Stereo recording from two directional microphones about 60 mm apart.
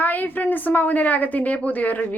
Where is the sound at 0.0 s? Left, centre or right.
Left.